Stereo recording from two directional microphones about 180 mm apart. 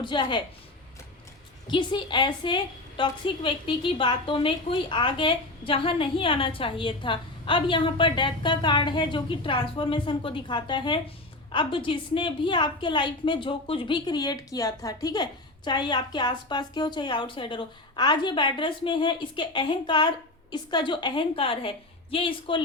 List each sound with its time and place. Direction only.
0.0 s a woman's voice: 25° left (ahead or behind)
1.6 s a woman's voice: 25° left (ahead or behind)